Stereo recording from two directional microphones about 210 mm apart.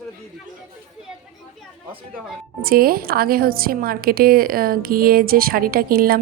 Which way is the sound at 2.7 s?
45° right (ahead or behind).